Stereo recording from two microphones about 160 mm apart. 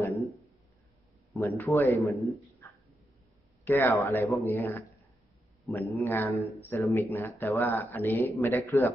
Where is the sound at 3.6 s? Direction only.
15° left (ahead or behind).